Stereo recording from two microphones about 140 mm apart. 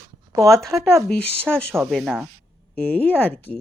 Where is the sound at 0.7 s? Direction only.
20° right (ahead or behind).